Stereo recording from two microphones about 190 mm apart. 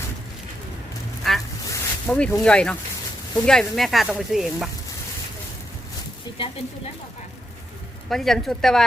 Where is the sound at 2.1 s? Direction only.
5° left (ahead or behind).